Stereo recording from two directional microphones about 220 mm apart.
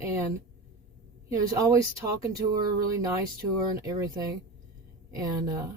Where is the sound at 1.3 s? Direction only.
15° right (ahead or behind).